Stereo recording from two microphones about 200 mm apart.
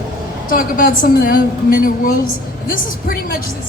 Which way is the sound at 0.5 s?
45° left (ahead or behind).